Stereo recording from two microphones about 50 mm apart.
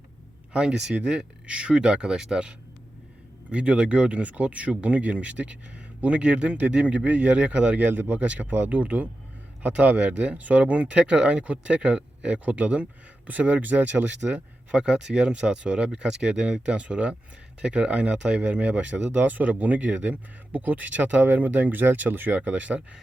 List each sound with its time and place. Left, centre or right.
0.5 s speech: centre
7.9 s speech: right
8.1 s speech: right
14.3 s speech: right
22.4 s speech: right